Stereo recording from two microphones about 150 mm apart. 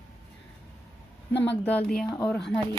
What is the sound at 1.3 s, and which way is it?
Speech, 10° left (ahead or behind).